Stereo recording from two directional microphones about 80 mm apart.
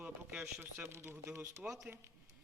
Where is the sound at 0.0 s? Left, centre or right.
Centre.